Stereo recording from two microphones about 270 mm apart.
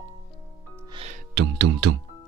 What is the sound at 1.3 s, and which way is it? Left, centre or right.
Speech, right.